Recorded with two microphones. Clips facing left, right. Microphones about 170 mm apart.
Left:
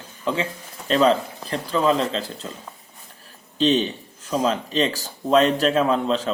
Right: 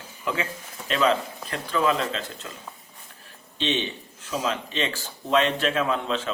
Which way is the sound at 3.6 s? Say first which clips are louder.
Left 8 dB; 40° left (ahead or behind).